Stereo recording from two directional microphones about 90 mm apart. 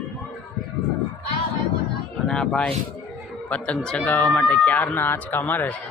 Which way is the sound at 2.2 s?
5° left (ahead or behind).